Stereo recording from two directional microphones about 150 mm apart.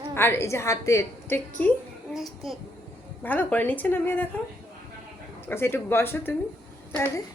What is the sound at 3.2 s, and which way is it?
Speech, 10° left (ahead or behind).